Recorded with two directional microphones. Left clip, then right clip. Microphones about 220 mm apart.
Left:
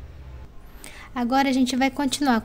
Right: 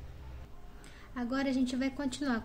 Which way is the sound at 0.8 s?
45° left (ahead or behind).